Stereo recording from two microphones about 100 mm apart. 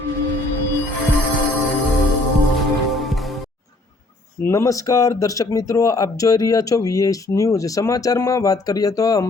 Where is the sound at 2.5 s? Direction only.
Centre (ahead or behind).